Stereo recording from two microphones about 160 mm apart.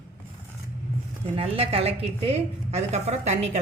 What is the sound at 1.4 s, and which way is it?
A woman's voice, 40° right (ahead or behind).